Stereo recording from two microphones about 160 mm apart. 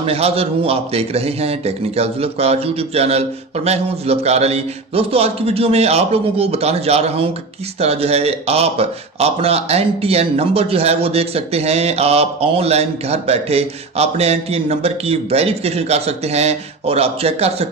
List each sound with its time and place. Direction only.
0.0 s speech: 40° right (ahead or behind)